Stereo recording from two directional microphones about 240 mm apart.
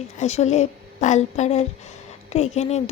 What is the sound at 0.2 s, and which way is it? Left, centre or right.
Speech, left.